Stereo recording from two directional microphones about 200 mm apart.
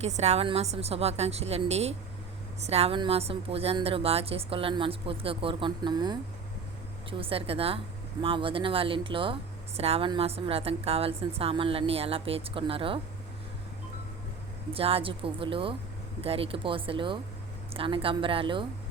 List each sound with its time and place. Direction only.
0.0 s a woman's voice: 35° right (ahead or behind)
14.7 s a woman's voice: 30° right (ahead or behind)